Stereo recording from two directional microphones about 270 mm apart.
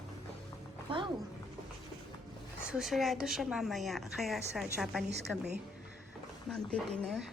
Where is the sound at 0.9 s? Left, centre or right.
Centre.